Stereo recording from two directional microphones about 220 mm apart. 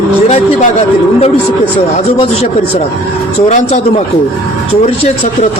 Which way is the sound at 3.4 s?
30° left (ahead or behind).